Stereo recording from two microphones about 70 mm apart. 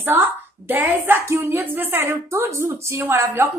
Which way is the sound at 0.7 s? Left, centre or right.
Right.